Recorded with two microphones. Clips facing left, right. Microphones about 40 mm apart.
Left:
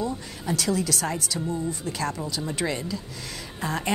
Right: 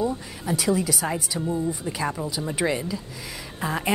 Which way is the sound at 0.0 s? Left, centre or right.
Centre.